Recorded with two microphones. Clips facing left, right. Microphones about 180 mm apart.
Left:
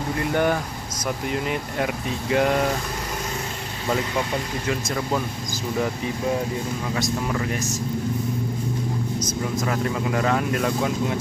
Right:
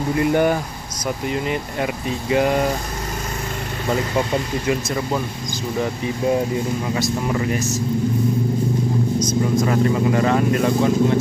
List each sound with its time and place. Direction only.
0.3 s speech: 10° right (ahead or behind)
1.2 s speech: centre (ahead or behind)
4.6 s speech: 10° right (ahead or behind)
7.0 s speech: 5° right (ahead or behind)
9.2 s speech: 5° left (ahead or behind)